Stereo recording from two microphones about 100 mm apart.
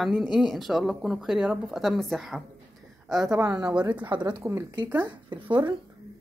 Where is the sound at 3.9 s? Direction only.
15° right (ahead or behind).